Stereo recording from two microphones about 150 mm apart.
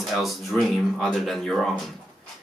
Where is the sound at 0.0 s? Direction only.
Centre (ahead or behind).